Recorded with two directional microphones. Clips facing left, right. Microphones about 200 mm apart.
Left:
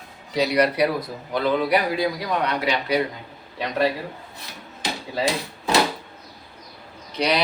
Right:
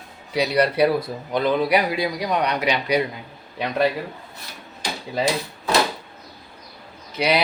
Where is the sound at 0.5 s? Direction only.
30° right (ahead or behind).